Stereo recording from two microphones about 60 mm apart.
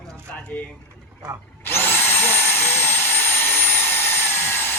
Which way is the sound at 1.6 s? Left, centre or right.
Left.